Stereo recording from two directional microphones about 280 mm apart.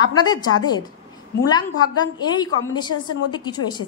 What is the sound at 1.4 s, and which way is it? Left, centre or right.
A woman's voice, centre.